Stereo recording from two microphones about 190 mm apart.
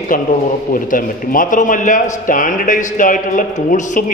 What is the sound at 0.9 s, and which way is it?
A man's voice, 45° left (ahead or behind).